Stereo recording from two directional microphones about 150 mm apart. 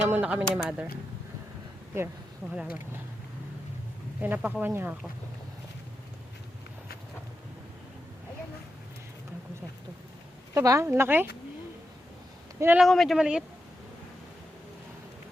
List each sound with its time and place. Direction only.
0.0 s speech: 10° right (ahead or behind)
2.5 s speech: 10° right (ahead or behind)
4.2 s speech: 10° right (ahead or behind)
10.5 s speech: 20° right (ahead or behind)
12.5 s speech: 15° right (ahead or behind)
12.8 s speech: centre (ahead or behind)